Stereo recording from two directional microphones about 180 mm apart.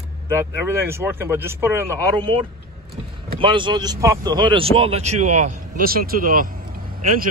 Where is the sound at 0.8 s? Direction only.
15° right (ahead or behind).